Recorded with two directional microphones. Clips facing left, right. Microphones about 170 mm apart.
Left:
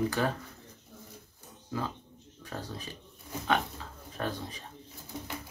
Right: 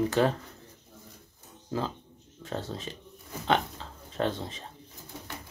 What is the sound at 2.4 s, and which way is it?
Speech, 25° right (ahead or behind).